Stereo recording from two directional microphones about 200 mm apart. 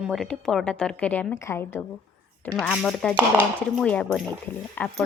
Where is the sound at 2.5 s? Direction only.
Centre (ahead or behind).